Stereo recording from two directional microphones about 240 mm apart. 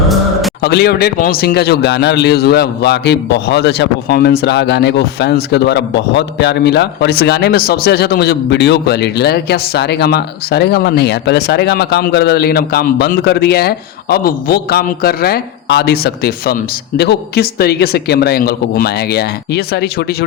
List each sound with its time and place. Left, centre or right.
0.6 s a man's voice: left